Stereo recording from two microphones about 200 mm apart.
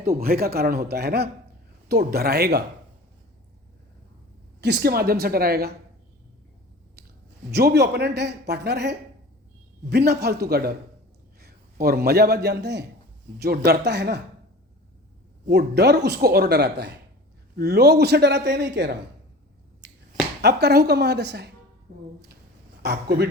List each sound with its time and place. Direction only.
0.0 s a man's voice: 50° right (ahead or behind)
4.6 s a man's voice: 55° right (ahead or behind)
7.5 s a man's voice: 55° right (ahead or behind)
15.4 s speech: 55° right (ahead or behind)
19.8 s finger snapping: 60° right (ahead or behind)
20.4 s speech: 55° right (ahead or behind)
22.8 s speech: 55° right (ahead or behind)